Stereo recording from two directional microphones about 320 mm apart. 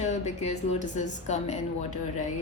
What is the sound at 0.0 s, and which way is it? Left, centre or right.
A woman's voice, left.